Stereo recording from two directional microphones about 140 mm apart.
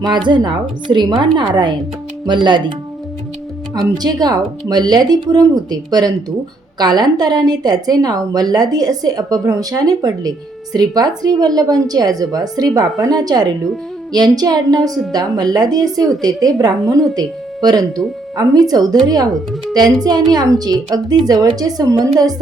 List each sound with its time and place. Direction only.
0.0 s a woman's voice: 35° right (ahead or behind)
3.9 s a woman's voice: 30° right (ahead or behind)
14.8 s a woman's voice: centre (ahead or behind)
15.1 s a woman's voice: 30° right (ahead or behind)